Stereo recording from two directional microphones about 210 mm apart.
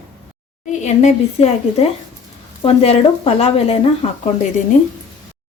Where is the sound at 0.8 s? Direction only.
30° left (ahead or behind).